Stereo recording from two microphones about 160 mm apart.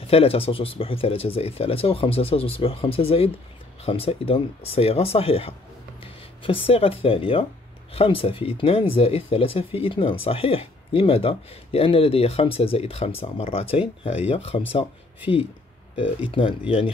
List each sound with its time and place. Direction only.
0.0 s speech: 40° left (ahead or behind)
16.3 s speech: 35° left (ahead or behind)